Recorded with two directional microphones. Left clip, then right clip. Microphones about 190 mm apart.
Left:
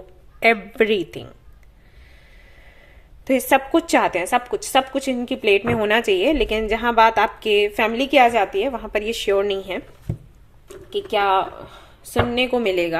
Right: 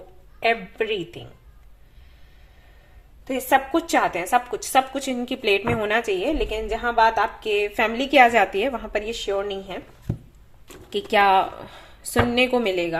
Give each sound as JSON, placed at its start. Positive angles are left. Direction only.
{"t": 0.3, "sound": "a woman's voice", "side_deg": 50}
{"t": 3.2, "sound": "a woman's voice", "side_deg": 40}
{"t": 3.7, "sound": "a woman's voice", "side_deg": 25}
{"t": 8.8, "sound": "a woman's voice", "side_deg": 20}
{"t": 9.2, "sound": "a woman's voice", "side_deg": 40}
{"t": 10.8, "sound": "a woman's voice", "side_deg": -5}
{"t": 12.7, "sound": "a woman's voice", "side_deg": 20}